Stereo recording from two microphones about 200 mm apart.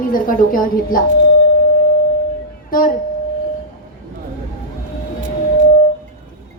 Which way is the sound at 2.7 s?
45° left (ahead or behind).